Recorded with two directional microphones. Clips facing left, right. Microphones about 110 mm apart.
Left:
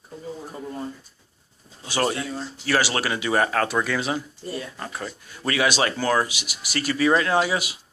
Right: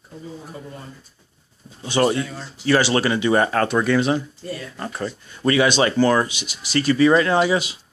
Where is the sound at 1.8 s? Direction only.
Centre (ahead or behind).